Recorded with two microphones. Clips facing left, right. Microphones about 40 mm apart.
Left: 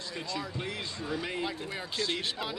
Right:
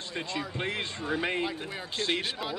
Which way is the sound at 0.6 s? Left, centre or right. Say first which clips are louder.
Right 4 dB; right.